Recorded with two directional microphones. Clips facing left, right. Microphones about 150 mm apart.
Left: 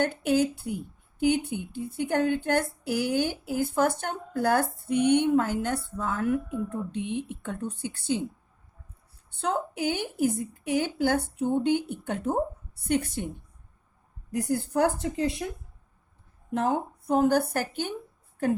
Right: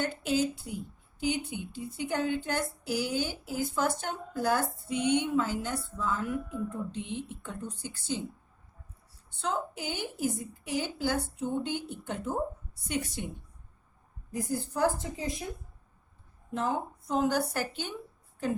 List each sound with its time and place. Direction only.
0.0 s a woman's voice: 60° left (ahead or behind)
9.4 s a woman's voice: 60° left (ahead or behind)
14.3 s a woman's voice: 65° left (ahead or behind)
16.5 s a woman's voice: 65° left (ahead or behind)